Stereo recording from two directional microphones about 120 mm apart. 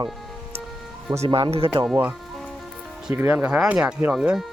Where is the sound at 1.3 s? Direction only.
45° right (ahead or behind).